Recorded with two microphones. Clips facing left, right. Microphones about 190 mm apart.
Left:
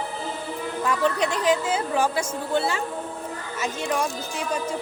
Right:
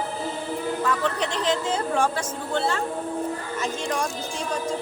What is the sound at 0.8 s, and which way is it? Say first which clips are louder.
A woman's voice: left 5 dB; 15° left (ahead or behind).